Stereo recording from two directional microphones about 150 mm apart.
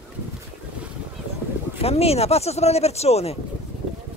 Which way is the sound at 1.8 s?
40° left (ahead or behind).